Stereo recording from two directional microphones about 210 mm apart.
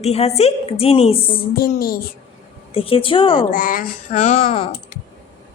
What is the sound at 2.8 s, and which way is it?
Speech, 25° left (ahead or behind).